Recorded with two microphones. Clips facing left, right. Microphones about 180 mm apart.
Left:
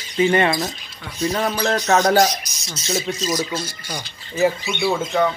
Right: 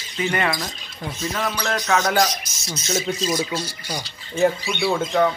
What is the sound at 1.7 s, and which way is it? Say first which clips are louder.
Speech: left 5 dB; 35° left (ahead or behind).